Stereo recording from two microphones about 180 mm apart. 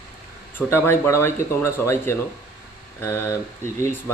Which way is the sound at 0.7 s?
15° left (ahead or behind).